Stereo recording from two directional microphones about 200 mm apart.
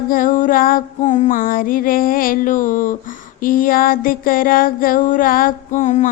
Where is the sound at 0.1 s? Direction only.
45° left (ahead or behind).